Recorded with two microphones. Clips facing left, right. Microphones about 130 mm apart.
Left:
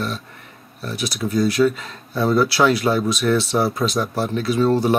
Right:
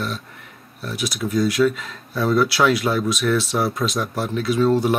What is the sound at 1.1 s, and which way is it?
Speech, 30° left (ahead or behind).